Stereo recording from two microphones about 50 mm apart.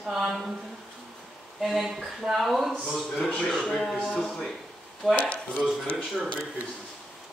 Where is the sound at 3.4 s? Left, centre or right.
Centre.